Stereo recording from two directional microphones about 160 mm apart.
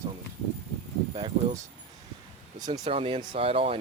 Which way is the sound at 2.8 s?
35° right (ahead or behind).